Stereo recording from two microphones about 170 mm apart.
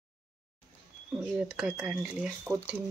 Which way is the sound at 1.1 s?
5° right (ahead or behind).